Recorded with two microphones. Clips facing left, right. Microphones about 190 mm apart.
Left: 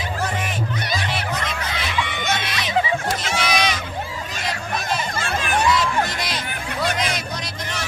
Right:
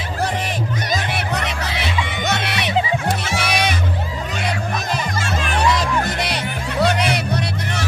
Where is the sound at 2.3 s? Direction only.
65° right (ahead or behind).